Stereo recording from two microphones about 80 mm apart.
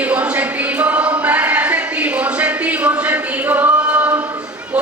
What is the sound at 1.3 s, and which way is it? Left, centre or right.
Music, centre.